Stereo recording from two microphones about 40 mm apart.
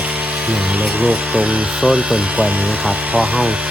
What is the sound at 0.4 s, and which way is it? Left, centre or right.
Speech, right.